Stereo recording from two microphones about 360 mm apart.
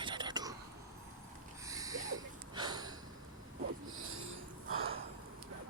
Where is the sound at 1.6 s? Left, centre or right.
Centre.